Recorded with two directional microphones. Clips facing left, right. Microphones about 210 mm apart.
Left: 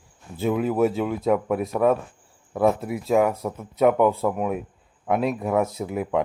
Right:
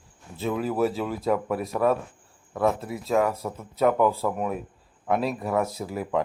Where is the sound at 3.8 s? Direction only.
20° left (ahead or behind).